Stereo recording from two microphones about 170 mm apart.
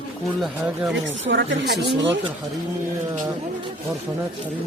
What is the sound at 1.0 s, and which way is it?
Speech, 90° right.